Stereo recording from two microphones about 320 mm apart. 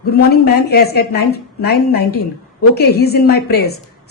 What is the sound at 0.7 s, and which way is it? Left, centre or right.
A woman's voice, left.